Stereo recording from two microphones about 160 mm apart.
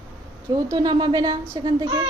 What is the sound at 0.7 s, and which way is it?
A woman's voice, 25° right (ahead or behind).